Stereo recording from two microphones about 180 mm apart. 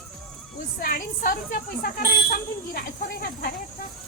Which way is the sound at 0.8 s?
50° left (ahead or behind).